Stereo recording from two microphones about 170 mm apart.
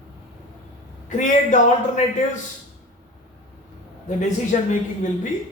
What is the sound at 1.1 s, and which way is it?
A man's voice, 50° left (ahead or behind).